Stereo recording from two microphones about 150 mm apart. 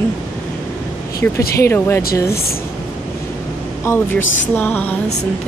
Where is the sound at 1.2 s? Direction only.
10° left (ahead or behind).